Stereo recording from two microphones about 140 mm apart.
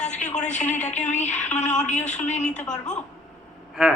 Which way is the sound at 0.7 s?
55° left (ahead or behind).